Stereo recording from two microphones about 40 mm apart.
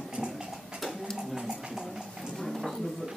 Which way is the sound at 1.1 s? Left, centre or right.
Centre.